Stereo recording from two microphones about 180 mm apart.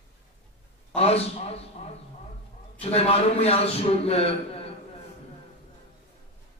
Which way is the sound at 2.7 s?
35° left (ahead or behind).